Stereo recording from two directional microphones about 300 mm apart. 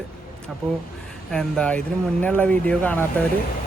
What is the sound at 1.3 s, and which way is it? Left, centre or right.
Speech, centre.